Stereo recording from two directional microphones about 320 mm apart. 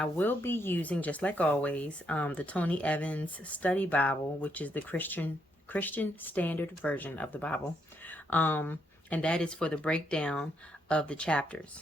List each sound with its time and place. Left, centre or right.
0.0 s speech: centre